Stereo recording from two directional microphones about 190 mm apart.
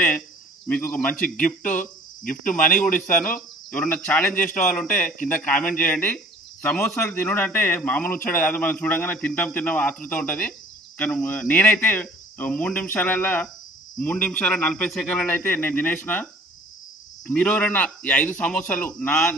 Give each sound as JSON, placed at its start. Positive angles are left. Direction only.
{"t": 0.7, "sound": "speech", "side_deg": 10}
{"t": 2.2, "sound": "speech", "side_deg": 45}
{"t": 3.3, "sound": "speech", "side_deg": 5}
{"t": 17.3, "sound": "speech", "side_deg": 5}